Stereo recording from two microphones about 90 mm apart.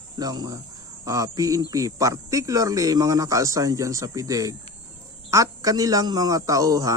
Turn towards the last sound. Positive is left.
turn(degrees=-40)  # may be behind; listen again after turning